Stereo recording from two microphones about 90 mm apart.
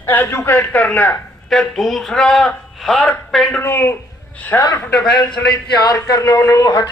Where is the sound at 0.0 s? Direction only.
20° left (ahead or behind).